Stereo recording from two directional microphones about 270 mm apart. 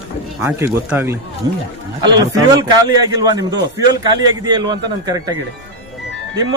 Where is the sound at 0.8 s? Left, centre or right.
Centre.